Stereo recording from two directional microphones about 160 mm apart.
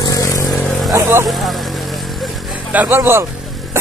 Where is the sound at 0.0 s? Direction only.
20° left (ahead or behind).